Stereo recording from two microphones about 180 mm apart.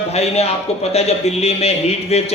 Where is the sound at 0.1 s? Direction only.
35° left (ahead or behind).